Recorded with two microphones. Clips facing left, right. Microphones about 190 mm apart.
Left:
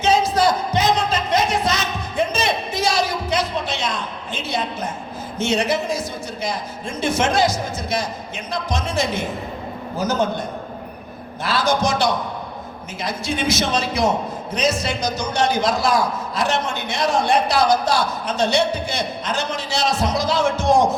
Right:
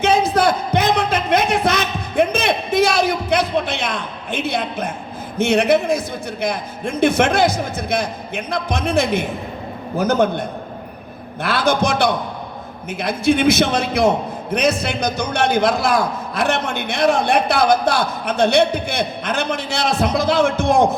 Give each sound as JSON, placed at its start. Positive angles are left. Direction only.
{"t": 0.0, "sound": "a sound", "side_deg": -60}
{"t": 5.4, "sound": "a man's voice", "side_deg": -60}
{"t": 11.4, "sound": "a man's voice", "side_deg": -55}